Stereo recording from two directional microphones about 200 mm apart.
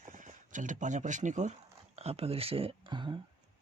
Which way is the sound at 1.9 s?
30° right (ahead or behind).